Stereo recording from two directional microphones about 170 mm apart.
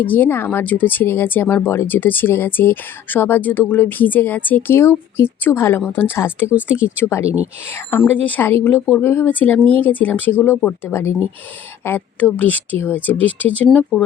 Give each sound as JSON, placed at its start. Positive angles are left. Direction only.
{"t": 0.0, "sound": "speech", "side_deg": 10}
{"t": 6.4, "sound": "speech", "side_deg": -10}
{"t": 7.0, "sound": "speech", "side_deg": 15}